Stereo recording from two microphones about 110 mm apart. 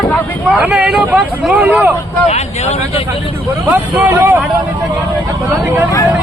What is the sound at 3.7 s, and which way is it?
Speech, 15° right (ahead or behind).